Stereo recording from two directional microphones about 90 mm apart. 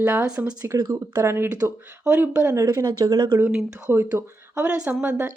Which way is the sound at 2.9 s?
45° right (ahead or behind).